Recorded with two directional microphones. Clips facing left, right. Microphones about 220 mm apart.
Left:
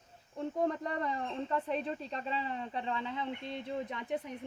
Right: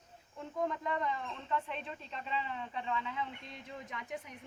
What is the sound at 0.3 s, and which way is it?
Speech, 35° left (ahead or behind).